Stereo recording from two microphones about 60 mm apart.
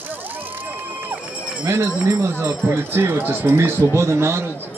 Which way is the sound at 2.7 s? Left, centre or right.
Right.